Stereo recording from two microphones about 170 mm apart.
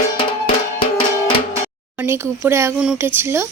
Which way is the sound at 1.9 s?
15° right (ahead or behind).